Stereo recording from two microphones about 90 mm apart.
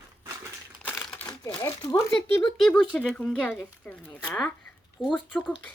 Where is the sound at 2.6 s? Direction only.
10° left (ahead or behind).